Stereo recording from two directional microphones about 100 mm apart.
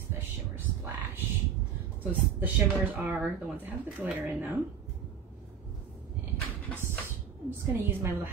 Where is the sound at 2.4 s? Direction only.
20° right (ahead or behind).